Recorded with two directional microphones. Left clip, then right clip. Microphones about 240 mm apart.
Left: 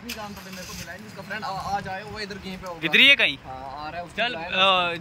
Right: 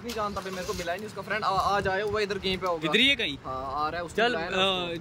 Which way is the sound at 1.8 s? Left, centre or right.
Right.